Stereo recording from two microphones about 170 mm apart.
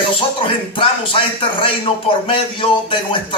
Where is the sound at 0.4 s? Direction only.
30° left (ahead or behind).